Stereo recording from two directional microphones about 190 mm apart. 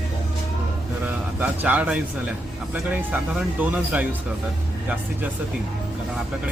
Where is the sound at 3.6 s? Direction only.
10° right (ahead or behind).